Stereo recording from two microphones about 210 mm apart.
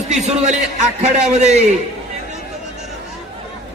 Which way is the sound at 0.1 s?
35° right (ahead or behind).